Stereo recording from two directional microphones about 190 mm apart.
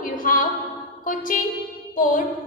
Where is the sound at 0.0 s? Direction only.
45° left (ahead or behind).